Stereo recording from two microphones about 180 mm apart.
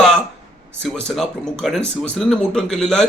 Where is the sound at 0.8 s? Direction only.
5° left (ahead or behind).